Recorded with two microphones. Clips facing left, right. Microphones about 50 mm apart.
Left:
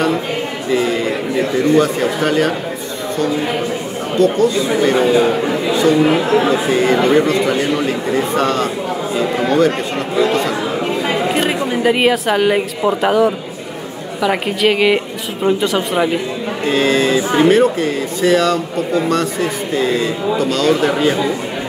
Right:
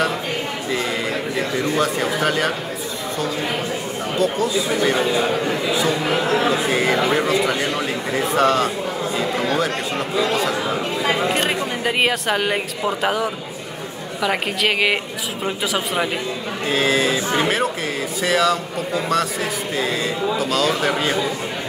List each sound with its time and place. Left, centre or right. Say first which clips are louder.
0.7 s a sound: left 8 dB; centre
1.8 s speech: left 5 dB; centre
4.2 s speech: left 7 dB; centre
4.9 s speech: left 6 dB; centre
5.7 s speech: left 10 dB; centre
11.1 s a woman's voice: left 1 dB; centre
19.7 s speech: left 6 dB; centre